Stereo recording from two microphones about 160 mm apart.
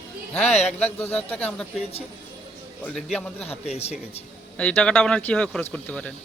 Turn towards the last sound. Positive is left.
turn(degrees=10)  # may be behind; listen again after turning